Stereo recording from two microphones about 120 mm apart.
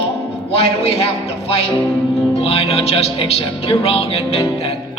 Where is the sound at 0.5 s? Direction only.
55° left (ahead or behind).